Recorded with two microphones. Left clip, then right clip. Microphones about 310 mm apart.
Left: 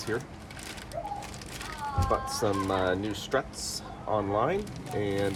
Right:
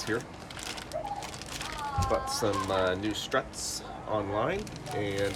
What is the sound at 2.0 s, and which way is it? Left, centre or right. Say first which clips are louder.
Speech: left 1 dB; centre.